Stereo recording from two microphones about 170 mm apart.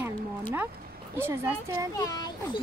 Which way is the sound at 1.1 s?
15° right (ahead or behind).